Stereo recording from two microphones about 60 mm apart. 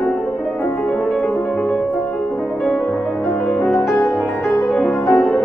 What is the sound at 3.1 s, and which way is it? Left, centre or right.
Music, centre.